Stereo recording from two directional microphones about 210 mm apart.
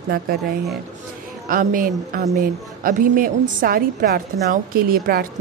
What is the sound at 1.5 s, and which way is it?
A woman's voice, 40° right (ahead or behind).